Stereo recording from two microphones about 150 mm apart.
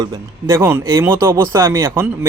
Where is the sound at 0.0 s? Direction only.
20° right (ahead or behind).